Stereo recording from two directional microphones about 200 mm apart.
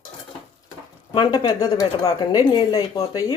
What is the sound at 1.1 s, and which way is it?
Speech, 25° left (ahead or behind).